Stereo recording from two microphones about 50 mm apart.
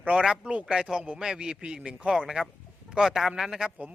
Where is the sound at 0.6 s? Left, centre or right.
Centre.